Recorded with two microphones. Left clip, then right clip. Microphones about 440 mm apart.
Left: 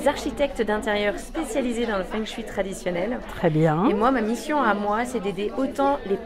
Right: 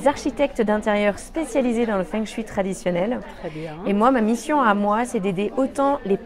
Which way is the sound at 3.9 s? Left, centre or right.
Right.